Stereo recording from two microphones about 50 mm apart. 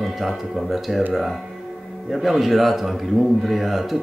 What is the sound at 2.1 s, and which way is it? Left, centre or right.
Speech, centre.